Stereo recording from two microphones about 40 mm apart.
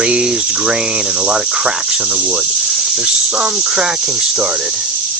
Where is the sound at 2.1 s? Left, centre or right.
Right.